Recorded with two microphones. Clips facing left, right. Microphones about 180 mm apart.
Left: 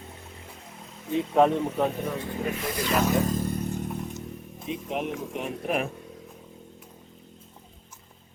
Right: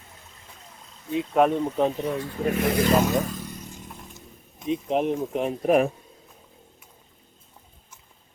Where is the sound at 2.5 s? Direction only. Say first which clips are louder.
Right 8 dB; 60° right (ahead or behind).